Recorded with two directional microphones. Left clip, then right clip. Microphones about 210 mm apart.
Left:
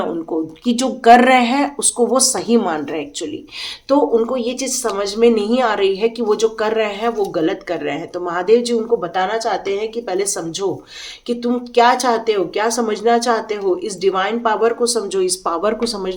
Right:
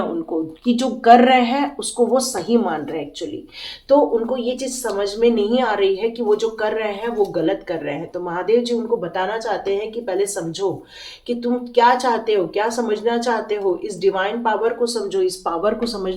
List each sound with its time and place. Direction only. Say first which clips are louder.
0.0 s speech: left 2 dB; 25° left (ahead or behind)